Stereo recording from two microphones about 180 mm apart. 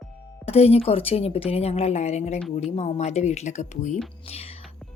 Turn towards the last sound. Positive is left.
turn(degrees=35)  # may be behind; listen again after turning